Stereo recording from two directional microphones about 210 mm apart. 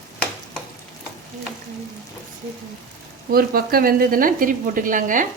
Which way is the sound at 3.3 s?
45° right (ahead or behind).